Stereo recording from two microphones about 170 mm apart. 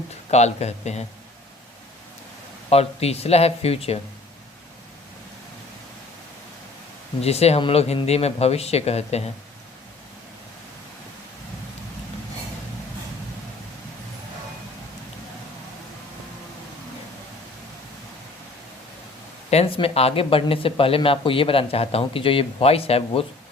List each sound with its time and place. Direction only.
0.3 s speech: 40° left (ahead or behind)
2.6 s speech: 35° left (ahead or behind)
7.2 s speech: 35° left (ahead or behind)
19.5 s speech: 35° left (ahead or behind)